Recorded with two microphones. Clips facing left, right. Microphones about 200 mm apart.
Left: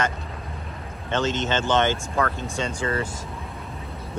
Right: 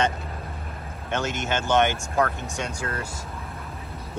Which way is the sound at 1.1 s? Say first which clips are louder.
Left 3 dB; 10° right (ahead or behind).